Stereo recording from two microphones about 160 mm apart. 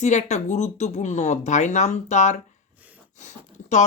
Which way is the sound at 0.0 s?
45° left (ahead or behind).